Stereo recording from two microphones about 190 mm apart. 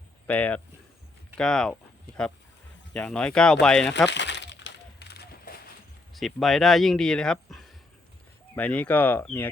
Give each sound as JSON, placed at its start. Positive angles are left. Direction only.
{"t": 0.3, "sound": "speech", "side_deg": 10}
{"t": 2.9, "sound": "speech", "side_deg": 5}
{"t": 4.1, "sound": "a sound", "side_deg": 65}
{"t": 6.1, "sound": "speech", "side_deg": 0}